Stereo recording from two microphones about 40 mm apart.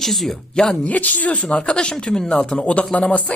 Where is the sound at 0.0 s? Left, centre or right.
Centre.